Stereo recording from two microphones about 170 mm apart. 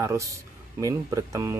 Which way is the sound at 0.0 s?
15° right (ahead or behind).